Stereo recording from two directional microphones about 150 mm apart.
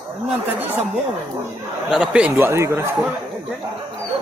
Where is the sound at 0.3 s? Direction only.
10° right (ahead or behind).